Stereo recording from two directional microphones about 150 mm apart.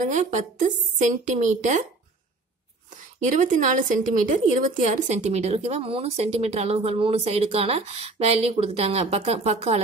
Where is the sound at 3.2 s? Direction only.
60° right (ahead or behind).